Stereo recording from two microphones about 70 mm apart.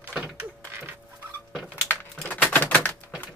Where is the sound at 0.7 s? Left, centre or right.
Right.